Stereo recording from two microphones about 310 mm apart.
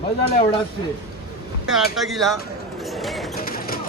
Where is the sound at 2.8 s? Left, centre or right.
Centre.